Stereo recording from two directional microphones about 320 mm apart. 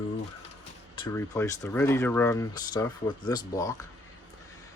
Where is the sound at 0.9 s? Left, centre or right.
Centre.